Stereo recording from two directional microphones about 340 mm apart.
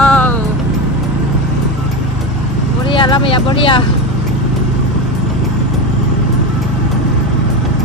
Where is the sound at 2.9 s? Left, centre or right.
Centre.